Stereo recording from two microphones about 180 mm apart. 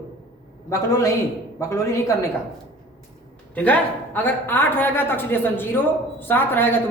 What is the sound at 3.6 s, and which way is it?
A man's voice, 10° left (ahead or behind).